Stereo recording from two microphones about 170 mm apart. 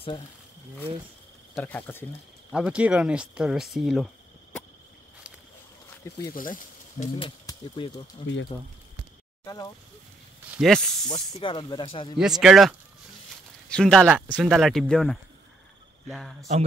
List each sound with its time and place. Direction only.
1.5 s speech: 10° left (ahead or behind)
2.5 s speech: 5° right (ahead or behind)
6.3 s speech: 50° left (ahead or behind)
7.2 s speech: 30° left (ahead or behind)
9.4 s speech: 20° left (ahead or behind)
10.5 s speech: centre (ahead or behind)
11.1 s speech: 40° left (ahead or behind)
11.5 s speech: 30° left (ahead or behind)
12.2 s speech: 5° right (ahead or behind)